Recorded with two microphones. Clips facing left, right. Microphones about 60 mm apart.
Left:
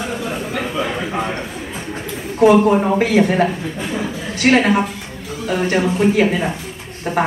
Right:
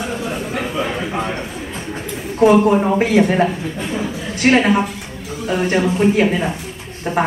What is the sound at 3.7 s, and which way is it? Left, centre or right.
Speech, centre.